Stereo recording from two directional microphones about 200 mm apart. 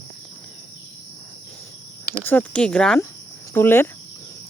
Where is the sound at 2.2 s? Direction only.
5° left (ahead or behind).